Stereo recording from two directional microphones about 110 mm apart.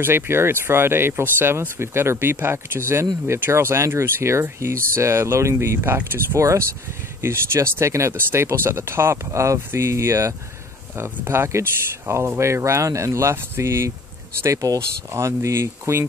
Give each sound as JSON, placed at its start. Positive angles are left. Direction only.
{"t": 0.0, "sound": "speech", "side_deg": -20}